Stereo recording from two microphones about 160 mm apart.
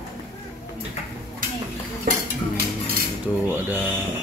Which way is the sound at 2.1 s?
60° right (ahead or behind).